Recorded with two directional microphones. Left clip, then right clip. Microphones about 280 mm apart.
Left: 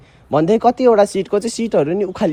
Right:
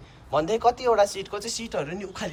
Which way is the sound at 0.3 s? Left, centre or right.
Left.